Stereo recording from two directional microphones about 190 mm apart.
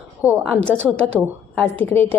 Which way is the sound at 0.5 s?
5° left (ahead or behind).